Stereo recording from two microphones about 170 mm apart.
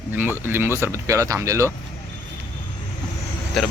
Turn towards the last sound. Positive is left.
turn(degrees=0)  # may be behind; listen again after turning